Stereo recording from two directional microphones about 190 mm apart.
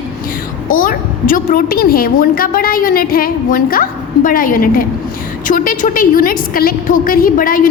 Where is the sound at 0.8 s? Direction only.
50° left (ahead or behind).